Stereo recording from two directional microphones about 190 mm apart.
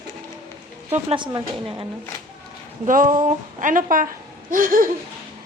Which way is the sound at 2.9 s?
45° right (ahead or behind).